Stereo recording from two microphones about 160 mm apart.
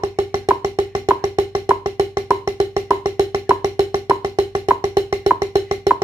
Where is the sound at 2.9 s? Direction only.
25° right (ahead or behind).